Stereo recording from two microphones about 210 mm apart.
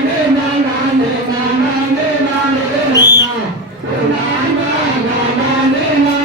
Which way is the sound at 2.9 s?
15° left (ahead or behind).